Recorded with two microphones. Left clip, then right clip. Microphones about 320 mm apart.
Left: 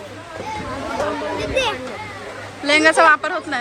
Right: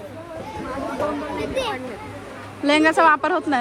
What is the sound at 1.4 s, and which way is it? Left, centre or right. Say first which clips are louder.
Speech: left 5 dB; left.